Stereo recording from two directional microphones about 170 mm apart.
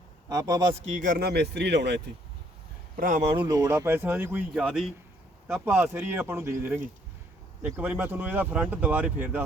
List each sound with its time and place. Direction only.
0.3 s a man's voice: 25° right (ahead or behind)
0.8 s speech: 45° right (ahead or behind); by 2.0 s 85° right
2.9 s speech: 50° right (ahead or behind)
3.2 s speech: 25° right (ahead or behind)
4.5 s speech: centre (ahead or behind)